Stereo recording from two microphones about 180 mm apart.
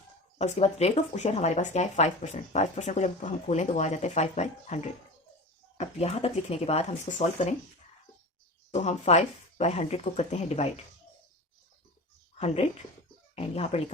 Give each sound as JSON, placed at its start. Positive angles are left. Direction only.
{"t": 0.3, "sound": "speech", "side_deg": 40}
{"t": 8.7, "sound": "speech", "side_deg": 40}
{"t": 13.3, "sound": "speech", "side_deg": 35}